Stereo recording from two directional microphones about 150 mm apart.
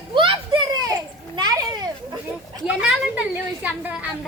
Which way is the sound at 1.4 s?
25° right (ahead or behind).